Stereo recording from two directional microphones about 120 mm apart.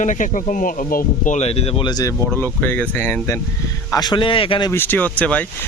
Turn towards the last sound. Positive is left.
turn(degrees=10)  # may be behind; listen again after turning